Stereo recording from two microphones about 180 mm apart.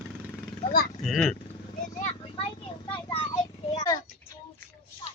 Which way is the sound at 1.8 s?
40° left (ahead or behind).